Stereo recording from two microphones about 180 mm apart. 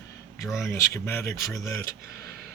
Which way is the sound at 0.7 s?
15° left (ahead or behind).